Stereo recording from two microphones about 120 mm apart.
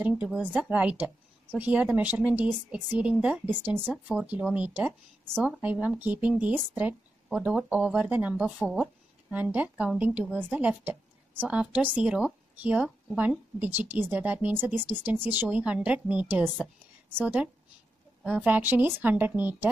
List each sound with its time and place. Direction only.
0.0 s speech: 10° right (ahead or behind)